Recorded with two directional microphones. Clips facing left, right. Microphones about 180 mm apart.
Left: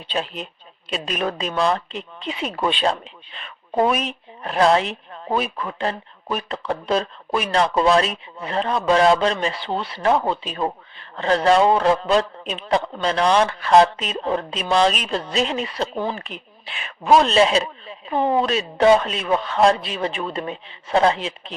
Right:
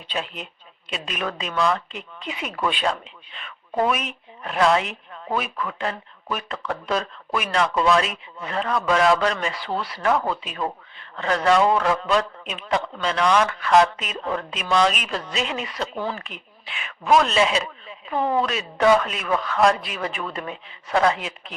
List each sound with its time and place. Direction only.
0.1 s speech: 35° left (ahead or behind)